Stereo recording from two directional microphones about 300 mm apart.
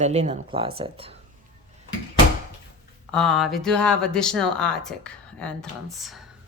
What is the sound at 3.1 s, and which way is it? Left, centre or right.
Speech, centre.